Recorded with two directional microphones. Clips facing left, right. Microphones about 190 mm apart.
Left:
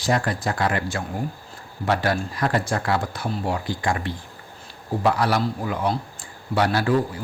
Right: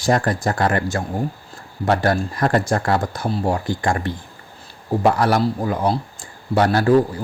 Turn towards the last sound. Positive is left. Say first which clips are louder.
# right 5 dB
turn(degrees=-45)  # may be behind; listen again after turning